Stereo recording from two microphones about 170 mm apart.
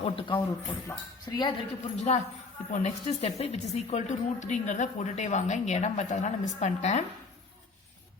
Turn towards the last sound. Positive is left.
turn(degrees=45)  # may be behind; listen again after turning